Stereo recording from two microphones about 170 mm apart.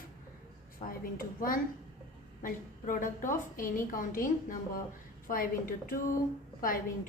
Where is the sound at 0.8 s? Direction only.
45° left (ahead or behind).